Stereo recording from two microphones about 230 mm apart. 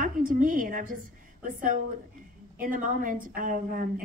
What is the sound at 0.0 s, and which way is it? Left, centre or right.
A woman's voice, right.